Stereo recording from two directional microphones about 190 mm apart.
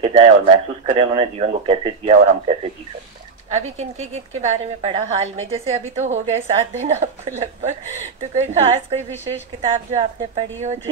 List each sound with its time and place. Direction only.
0.0 s a woman's voice: 30° right (ahead or behind)